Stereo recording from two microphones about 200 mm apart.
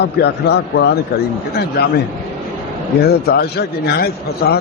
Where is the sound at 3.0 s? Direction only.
55° left (ahead or behind).